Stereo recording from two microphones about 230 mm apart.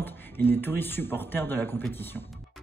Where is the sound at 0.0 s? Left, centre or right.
Centre.